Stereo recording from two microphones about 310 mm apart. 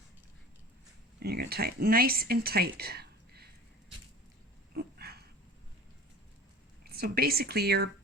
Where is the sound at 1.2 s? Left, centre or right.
Right.